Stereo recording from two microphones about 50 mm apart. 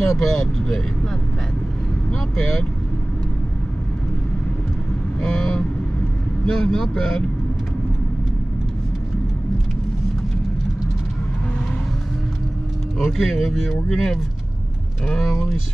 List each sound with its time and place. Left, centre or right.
0.1 s speech: centre
2.3 s vehicle: centre
5.2 s vehicle: centre
6.4 s speech: centre
13.0 s speech: centre
15.0 s speech: centre